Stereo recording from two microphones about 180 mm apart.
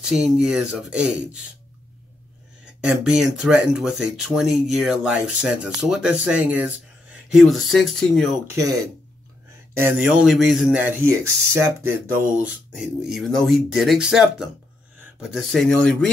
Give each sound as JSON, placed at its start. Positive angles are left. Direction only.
{"t": 0.0, "sound": "speech", "side_deg": -5}
{"t": 2.6, "sound": "speech", "side_deg": -5}
{"t": 8.5, "sound": "speech", "side_deg": -20}
{"t": 12.7, "sound": "speech", "side_deg": 0}